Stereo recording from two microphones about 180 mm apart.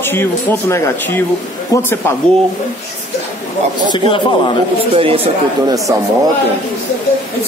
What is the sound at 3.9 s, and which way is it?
Speech, 25° left (ahead or behind).